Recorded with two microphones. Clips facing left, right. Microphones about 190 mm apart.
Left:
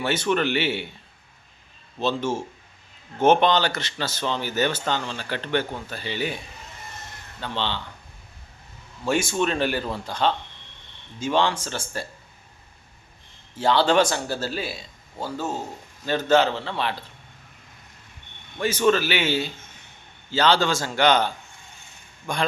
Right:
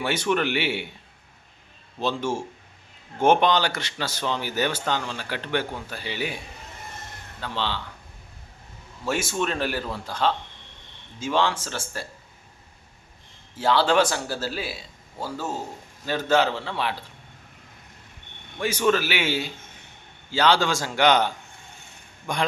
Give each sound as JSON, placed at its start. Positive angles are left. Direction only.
{"t": 0.0, "sound": "speech", "side_deg": -15}
{"t": 2.0, "sound": "speech", "side_deg": -15}
{"t": 7.4, "sound": "a man's voice", "side_deg": -5}
{"t": 9.0, "sound": "a man's voice", "side_deg": -5}
{"t": 13.6, "sound": "a man's voice", "side_deg": -5}
{"t": 18.6, "sound": "speech", "side_deg": -15}